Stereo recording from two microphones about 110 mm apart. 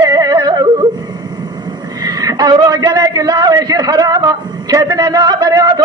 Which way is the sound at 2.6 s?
35° right (ahead or behind).